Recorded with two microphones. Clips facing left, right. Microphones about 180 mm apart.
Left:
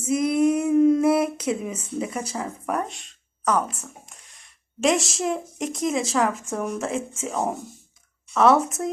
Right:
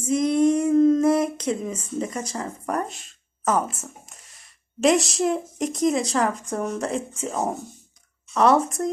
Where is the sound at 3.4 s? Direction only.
45° right (ahead or behind).